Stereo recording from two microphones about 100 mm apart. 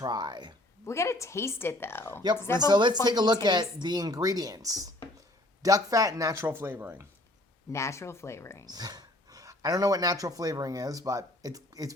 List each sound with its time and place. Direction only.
0.0 s speech: 45° right (ahead or behind)
0.9 s a woman's voice: 30° left (ahead or behind)
2.6 s speech: 45° right (ahead or behind)
6.4 s speech: 20° right (ahead or behind)
7.7 s a woman's voice: 30° left (ahead or behind)
8.6 s speech: 40° right (ahead or behind)